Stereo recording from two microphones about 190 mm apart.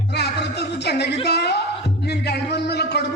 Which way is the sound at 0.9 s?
60° left (ahead or behind).